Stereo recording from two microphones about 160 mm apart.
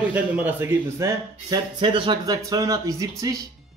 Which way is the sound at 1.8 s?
30° right (ahead or behind).